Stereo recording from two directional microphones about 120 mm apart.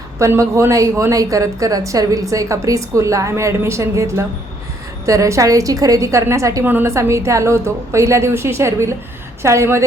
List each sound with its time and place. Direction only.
0.2 s a woman's voice: 25° right (ahead or behind)